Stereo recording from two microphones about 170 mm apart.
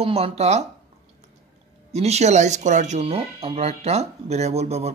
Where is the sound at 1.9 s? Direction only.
40° right (ahead or behind).